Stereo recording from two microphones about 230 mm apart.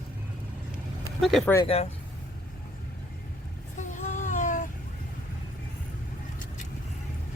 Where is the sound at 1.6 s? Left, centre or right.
Left.